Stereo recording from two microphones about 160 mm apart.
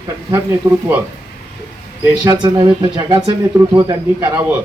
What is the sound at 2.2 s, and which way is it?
Speech, 30° right (ahead or behind).